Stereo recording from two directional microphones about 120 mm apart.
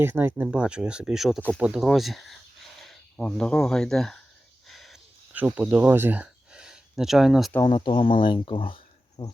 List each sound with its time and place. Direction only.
0.0 s speech: 20° right (ahead or behind); by 4.2 s 5° left (ahead or behind)
4.7 s a sound: centre (ahead or behind)
5.5 s speech: 15° right (ahead or behind)
7.6 s speech: 45° left (ahead or behind)
9.2 s speech: 40° left (ahead or behind)